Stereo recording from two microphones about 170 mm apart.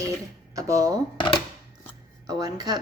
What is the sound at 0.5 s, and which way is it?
Speech, 20° right (ahead or behind).